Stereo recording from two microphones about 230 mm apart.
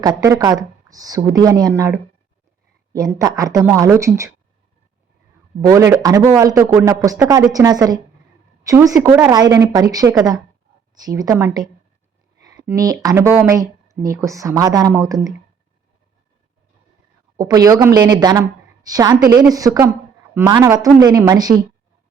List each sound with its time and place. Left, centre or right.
0.0 s speech: centre
5.6 s speech: centre
17.3 s speech: centre